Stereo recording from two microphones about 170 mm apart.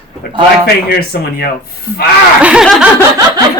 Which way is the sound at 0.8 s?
65° left (ahead or behind).